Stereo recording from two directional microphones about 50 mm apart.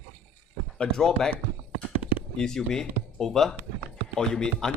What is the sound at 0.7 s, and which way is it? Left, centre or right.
Speech, centre.